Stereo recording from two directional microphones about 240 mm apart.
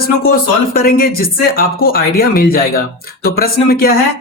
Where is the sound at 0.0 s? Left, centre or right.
Left.